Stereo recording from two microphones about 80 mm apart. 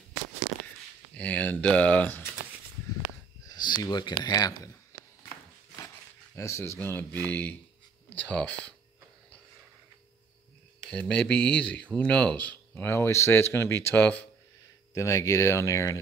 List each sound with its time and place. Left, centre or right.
1.1 s speech: centre
3.4 s speech: left
6.3 s speech: left
6.8 s speech: left
10.8 s speech: centre
12.8 s speech: left
15.0 s speech: left